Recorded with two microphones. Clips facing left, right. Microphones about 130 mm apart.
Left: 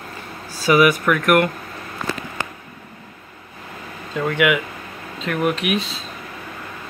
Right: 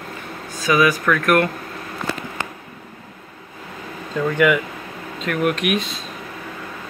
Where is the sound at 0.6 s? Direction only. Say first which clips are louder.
Left 2 dB; 25° left (ahead or behind).